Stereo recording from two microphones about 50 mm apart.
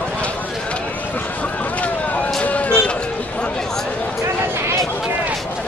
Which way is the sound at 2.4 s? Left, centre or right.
Left.